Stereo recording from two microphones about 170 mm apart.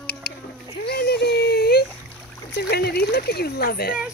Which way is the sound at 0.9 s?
75° left (ahead or behind).